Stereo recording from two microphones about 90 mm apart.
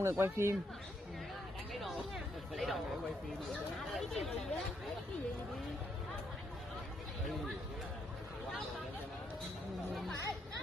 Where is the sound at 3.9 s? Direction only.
Centre (ahead or behind).